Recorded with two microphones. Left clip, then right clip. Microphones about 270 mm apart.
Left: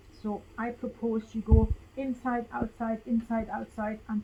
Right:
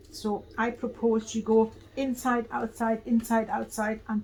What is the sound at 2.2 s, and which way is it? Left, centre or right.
A woman's voice, centre.